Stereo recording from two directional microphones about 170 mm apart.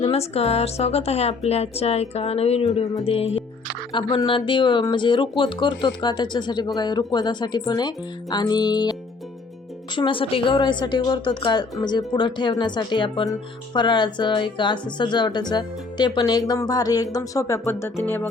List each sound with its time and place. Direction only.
0.0 s a woman's voice: 35° left (ahead or behind)
16.5 s music: 20° left (ahead or behind)